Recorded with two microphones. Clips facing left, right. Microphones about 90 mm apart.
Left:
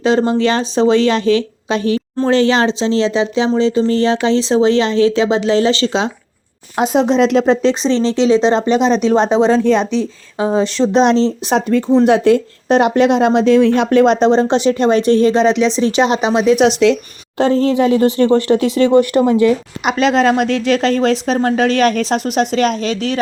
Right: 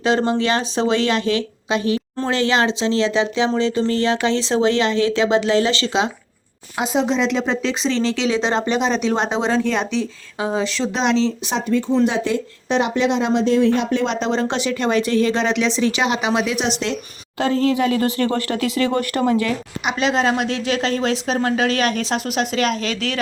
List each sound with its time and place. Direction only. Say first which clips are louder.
0.0 s speech: left 5 dB; 25° left (ahead or behind)
6.7 s speech: left 6 dB; 45° left (ahead or behind)
11.5 s a woman's voice: left 7 dB; 55° left (ahead or behind); by 14.0 s 80° left
14.0 s speech: left 10 dB; 45° left (ahead or behind)
14.4 s speech: left 7 dB; 25° left (ahead or behind)
15.3 s speech: left 7 dB; 20° left (ahead or behind)
16.6 s speech: left 11 dB; 70° left (ahead or behind)
17.3 s speech: left 5 dB; 30° left (ahead or behind)
19.9 s speech: left 6 dB; 45° left (ahead or behind); by 23.2 s 30° left (ahead or behind)